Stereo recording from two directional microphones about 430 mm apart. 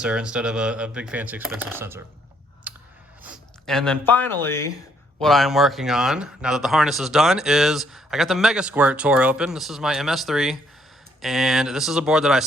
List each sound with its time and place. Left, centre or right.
0.0 s speech: centre
2.7 s clicking: centre
3.2 s speech: centre